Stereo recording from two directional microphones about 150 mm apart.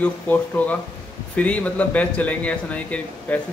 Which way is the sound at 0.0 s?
10° left (ahead or behind).